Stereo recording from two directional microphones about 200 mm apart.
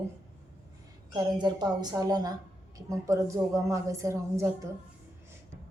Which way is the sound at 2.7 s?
15° right (ahead or behind).